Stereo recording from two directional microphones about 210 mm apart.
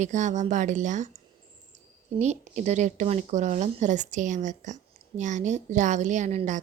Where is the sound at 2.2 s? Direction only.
35° right (ahead or behind).